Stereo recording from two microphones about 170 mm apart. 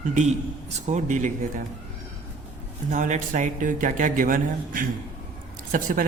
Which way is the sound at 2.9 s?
50° right (ahead or behind).